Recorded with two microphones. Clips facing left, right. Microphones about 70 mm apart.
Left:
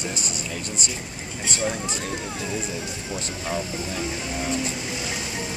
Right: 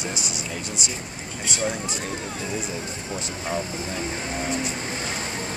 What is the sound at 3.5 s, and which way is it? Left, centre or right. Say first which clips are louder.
Speech: even; right.